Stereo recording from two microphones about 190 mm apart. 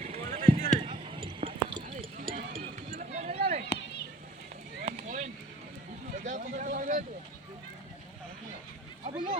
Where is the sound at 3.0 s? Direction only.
40° right (ahead or behind).